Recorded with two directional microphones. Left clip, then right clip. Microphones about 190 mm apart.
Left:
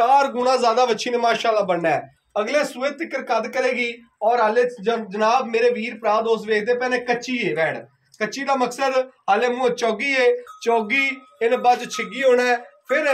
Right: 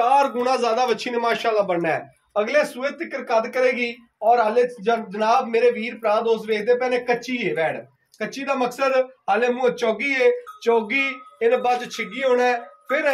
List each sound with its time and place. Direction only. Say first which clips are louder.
0.0 s a man's voice: left 1 dB; 35° left (ahead or behind); by 13.1 s 60° left (ahead or behind)